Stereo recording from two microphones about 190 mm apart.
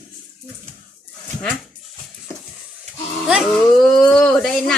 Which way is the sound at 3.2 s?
Centre (ahead or behind).